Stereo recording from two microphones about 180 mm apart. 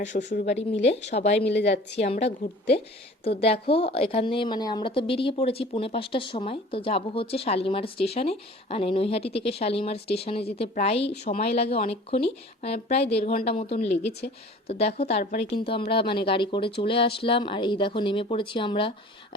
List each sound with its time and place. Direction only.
0.3 s a woman's voice: 40° left (ahead or behind)
1.5 s a woman's voice: 70° left (ahead or behind)
2.0 s a woman's voice: 35° left (ahead or behind)
14.0 s a woman's voice: 65° left (ahead or behind)
14.7 s a woman's voice: 35° left (ahead or behind)
15.5 s speech: 30° left (ahead or behind)